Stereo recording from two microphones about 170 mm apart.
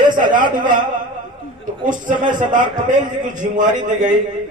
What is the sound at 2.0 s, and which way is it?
A man's voice, 50° right (ahead or behind).